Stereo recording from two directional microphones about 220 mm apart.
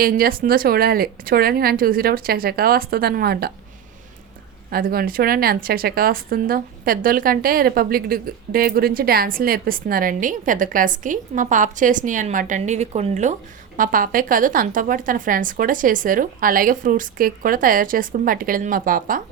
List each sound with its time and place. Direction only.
0.0 s speech: 40° right (ahead or behind)
4.7 s speech: 40° right (ahead or behind)